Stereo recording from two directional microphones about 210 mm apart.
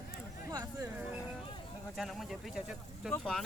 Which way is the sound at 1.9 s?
Centre (ahead or behind).